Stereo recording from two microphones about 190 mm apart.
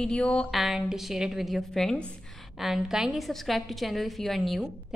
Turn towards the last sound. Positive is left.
turn(degrees=0)  # may be behind; listen again after turning